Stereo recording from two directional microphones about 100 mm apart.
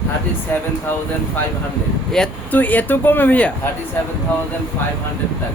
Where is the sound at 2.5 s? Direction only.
15° left (ahead or behind).